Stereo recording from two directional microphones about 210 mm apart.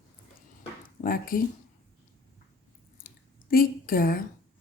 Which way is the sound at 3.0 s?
45° left (ahead or behind).